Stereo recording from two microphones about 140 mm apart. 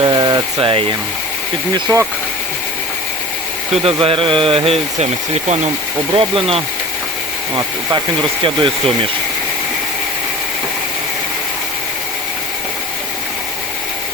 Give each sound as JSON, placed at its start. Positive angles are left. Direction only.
{"t": 0.0, "sound": "a sound", "side_deg": -30}
{"t": 1.7, "sound": "speech", "side_deg": -20}
{"t": 4.0, "sound": "speech", "side_deg": -40}